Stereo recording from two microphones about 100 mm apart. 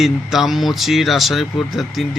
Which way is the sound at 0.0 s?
Centre (ahead or behind).